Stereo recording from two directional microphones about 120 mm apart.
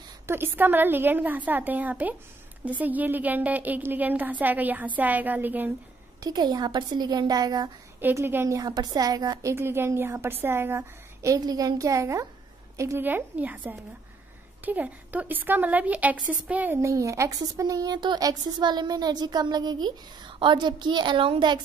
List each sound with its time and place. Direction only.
0.3 s a woman's voice: 15° right (ahead or behind)
6.2 s a woman's voice: 35° right (ahead or behind)
8.0 s a woman's voice: 20° right (ahead or behind)
14.6 s a woman's voice: 15° right (ahead or behind); by 21.5 s 45° right (ahead or behind)